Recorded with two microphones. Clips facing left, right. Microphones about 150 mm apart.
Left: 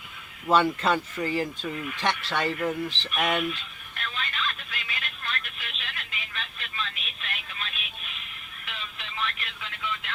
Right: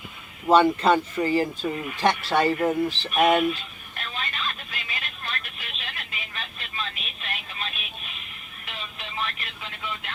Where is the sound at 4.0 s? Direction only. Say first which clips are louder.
Even; 40° right (ahead or behind).